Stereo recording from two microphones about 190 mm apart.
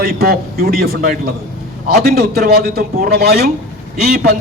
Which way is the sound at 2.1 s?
55° right (ahead or behind).